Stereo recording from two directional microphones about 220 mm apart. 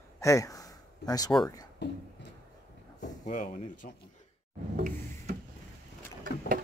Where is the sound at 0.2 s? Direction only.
15° left (ahead or behind).